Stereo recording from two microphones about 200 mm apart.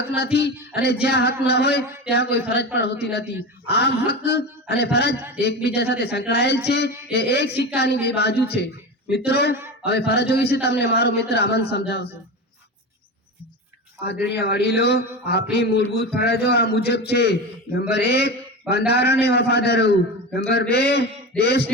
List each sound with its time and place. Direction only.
0.2 s a man's voice: 55° left (ahead or behind)
14.3 s a man's voice: 55° left (ahead or behind)